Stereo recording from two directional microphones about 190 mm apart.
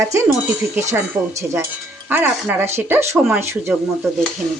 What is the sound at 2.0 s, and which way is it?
Speech, 10° right (ahead or behind).